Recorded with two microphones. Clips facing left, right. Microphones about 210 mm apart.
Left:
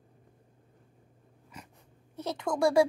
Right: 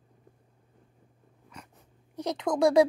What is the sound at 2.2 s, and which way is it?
Speech, 15° right (ahead or behind).